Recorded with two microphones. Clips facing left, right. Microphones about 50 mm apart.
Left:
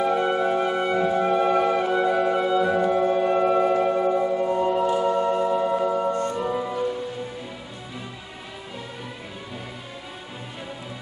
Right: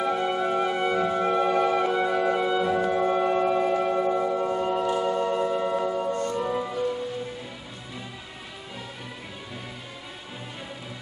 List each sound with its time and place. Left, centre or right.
0.0 s music: centre
6.0 s music: left
6.4 s music: centre